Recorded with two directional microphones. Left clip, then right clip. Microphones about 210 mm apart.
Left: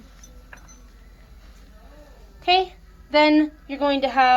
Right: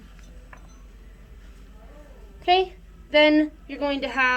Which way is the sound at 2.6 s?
10° left (ahead or behind).